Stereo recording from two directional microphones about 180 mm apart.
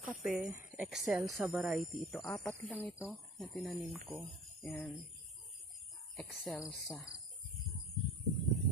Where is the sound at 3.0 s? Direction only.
Centre (ahead or behind).